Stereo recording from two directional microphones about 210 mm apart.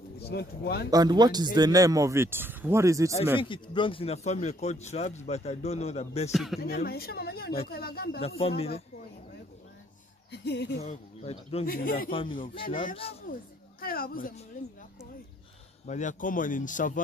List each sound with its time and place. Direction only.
0.2 s a woman's voice: 50° left (ahead or behind)
0.8 s speech: 20° right (ahead or behind)
3.3 s a man's voice: 25° left (ahead or behind)
6.3 s speech: centre (ahead or behind)
6.6 s a woman's voice: 45° left (ahead or behind)
8.4 s speech: 25° left (ahead or behind)
10.3 s speech: 55° left (ahead or behind)
10.8 s speech: 30° left (ahead or behind)
11.6 s a woman's voice: 45° left (ahead or behind)
12.1 s speech: 25° left (ahead or behind)
12.6 s a man's voice: 40° left (ahead or behind)
13.3 s a sound: 45° left (ahead or behind)
15.9 s a man's voice: 35° left (ahead or behind)